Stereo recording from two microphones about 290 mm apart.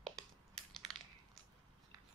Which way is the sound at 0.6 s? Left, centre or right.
Centre.